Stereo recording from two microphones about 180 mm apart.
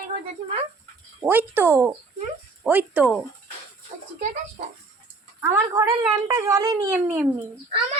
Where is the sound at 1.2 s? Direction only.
10° right (ahead or behind).